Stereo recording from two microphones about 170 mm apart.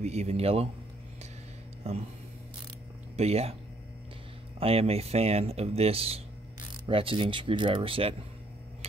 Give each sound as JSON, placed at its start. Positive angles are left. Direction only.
{"t": 0.0, "sound": "speech", "side_deg": -40}
{"t": 1.8, "sound": "speech", "side_deg": -35}
{"t": 3.2, "sound": "speech", "side_deg": -35}
{"t": 4.6, "sound": "speech", "side_deg": -35}